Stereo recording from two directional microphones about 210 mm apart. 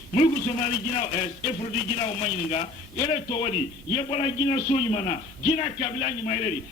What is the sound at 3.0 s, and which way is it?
A man's voice, 30° left (ahead or behind).